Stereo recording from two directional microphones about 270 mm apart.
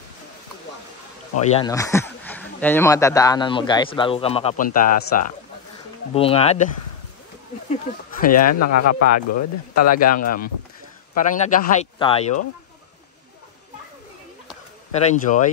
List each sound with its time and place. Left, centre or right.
1.4 s speech: left
1.7 s speech: centre
8.3 s speech: left
9.9 s speech: left
14.9 s speech: left